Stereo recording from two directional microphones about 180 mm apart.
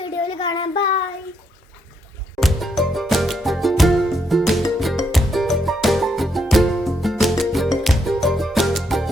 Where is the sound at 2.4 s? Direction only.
Centre (ahead or behind).